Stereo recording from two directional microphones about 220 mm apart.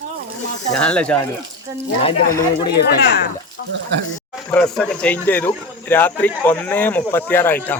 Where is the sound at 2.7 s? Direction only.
50° left (ahead or behind).